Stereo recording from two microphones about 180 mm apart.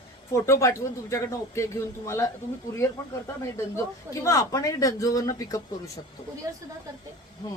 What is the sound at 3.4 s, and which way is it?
A man's voice, 15° left (ahead or behind).